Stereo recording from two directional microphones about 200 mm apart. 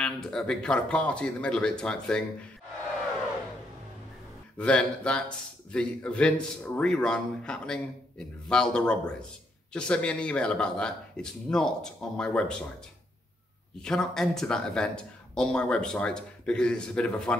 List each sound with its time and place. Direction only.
0.0 s speech: 5° left (ahead or behind)
4.6 s speech: 5° left (ahead or behind)
13.7 s speech: 5° left (ahead or behind)